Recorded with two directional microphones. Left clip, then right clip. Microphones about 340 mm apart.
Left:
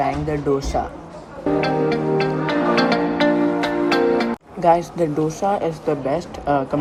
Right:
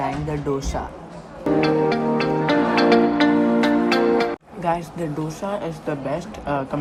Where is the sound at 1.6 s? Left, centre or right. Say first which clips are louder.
Right 1 dB; centre.